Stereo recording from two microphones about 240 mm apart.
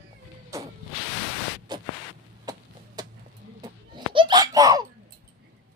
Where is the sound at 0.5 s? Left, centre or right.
Centre.